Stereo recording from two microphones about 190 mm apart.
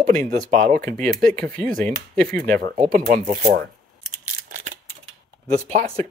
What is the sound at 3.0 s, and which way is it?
Speech, 40° right (ahead or behind).